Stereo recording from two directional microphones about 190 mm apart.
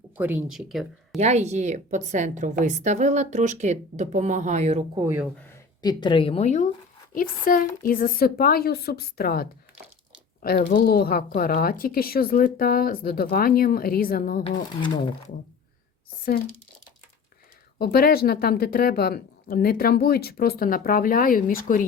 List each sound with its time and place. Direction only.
0.2 s speech: 10° right (ahead or behind)
1.2 s a woman's voice: 35° right (ahead or behind)
5.2 s speech: 5° left (ahead or behind)
5.8 s speech: 25° left (ahead or behind)
7.1 s speech: 45° left (ahead or behind)
14.8 s speech: 25° left (ahead or behind)
17.7 s speech: 55° left (ahead or behind)